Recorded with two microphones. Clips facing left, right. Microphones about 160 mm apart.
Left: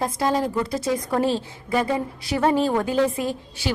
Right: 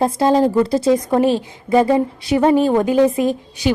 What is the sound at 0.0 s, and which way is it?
A woman's voice, 30° right (ahead or behind).